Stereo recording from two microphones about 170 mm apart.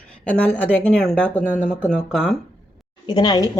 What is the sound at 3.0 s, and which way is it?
Speech, 25° left (ahead or behind).